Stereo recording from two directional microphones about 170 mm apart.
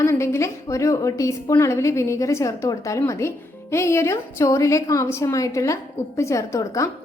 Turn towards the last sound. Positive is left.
turn(degrees=20)  # may be behind; listen again after turning